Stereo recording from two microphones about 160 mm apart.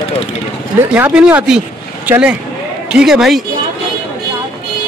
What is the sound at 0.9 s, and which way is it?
A man's voice, 10° right (ahead or behind).